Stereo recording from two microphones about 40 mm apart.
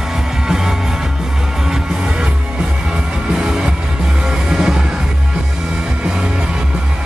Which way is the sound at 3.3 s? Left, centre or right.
Centre.